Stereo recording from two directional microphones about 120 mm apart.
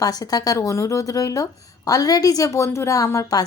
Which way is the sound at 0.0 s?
30° left (ahead or behind).